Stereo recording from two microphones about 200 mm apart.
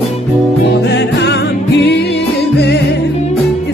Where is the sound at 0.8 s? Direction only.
55° left (ahead or behind).